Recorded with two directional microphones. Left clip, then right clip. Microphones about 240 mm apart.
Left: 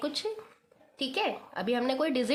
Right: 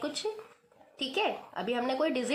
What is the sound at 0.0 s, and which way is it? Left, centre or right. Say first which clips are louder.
A woman's voice: left 1 dB; left.